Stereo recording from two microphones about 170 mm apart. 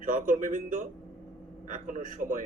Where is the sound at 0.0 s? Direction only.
50° right (ahead or behind).